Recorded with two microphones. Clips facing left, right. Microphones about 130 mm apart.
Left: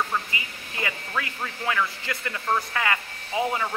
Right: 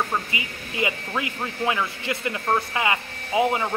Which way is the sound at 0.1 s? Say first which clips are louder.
Right 2 dB; 20° right (ahead or behind).